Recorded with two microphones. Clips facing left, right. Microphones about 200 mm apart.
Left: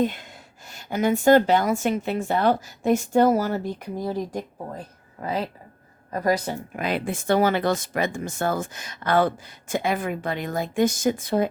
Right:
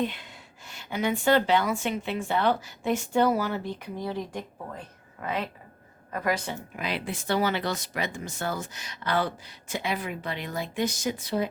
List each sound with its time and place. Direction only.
0.0 s a woman's voice: 45° left (ahead or behind)